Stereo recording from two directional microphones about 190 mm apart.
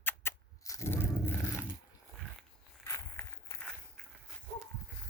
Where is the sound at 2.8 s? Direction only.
15° left (ahead or behind).